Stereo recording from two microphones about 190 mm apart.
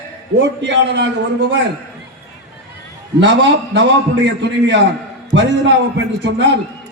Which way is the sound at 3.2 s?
70° right (ahead or behind).